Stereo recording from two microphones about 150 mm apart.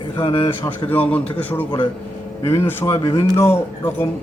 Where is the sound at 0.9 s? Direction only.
10° left (ahead or behind).